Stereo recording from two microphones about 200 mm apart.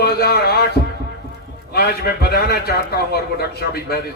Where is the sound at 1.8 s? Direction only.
55° left (ahead or behind).